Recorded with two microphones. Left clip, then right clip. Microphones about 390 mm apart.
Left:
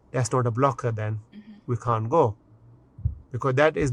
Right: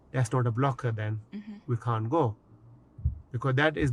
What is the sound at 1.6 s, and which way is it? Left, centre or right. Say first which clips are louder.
Speech: left 7 dB; left.